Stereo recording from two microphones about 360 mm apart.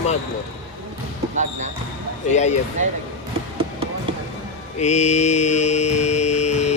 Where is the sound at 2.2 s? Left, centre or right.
Centre.